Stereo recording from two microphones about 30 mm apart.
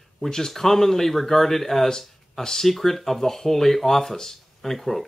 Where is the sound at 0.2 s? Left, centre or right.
Centre.